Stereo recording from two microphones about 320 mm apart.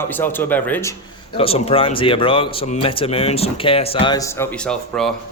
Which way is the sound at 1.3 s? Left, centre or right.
Centre.